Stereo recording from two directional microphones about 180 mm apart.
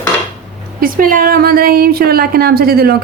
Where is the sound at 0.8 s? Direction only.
50° right (ahead or behind).